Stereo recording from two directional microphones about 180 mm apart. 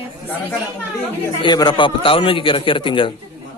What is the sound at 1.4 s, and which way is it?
A man's voice, 25° left (ahead or behind).